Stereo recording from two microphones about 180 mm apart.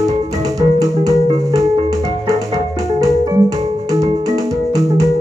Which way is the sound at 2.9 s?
20° right (ahead or behind).